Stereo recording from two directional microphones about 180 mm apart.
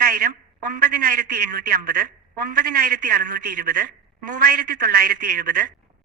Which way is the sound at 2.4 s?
50° right (ahead or behind).